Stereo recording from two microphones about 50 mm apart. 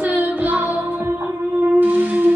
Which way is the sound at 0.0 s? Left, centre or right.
Right.